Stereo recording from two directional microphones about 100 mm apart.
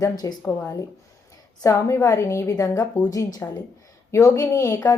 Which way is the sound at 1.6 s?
30° left (ahead or behind).